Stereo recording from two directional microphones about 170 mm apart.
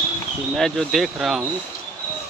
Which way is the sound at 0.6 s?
Centre (ahead or behind).